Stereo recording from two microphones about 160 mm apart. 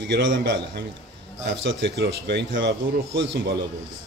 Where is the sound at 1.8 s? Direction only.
90° right.